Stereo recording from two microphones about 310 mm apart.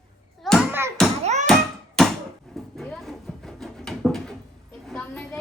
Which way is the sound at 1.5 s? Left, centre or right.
Centre.